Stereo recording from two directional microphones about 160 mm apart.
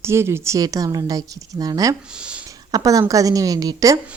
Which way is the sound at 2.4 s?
20° right (ahead or behind).